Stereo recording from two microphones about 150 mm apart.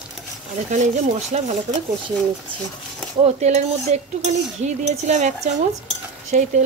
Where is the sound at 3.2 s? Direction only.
50° right (ahead or behind).